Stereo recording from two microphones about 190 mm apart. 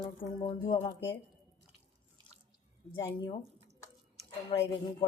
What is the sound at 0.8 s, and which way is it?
Speech, 15° left (ahead or behind).